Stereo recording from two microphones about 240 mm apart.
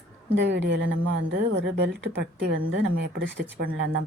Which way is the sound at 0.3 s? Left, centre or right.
Right.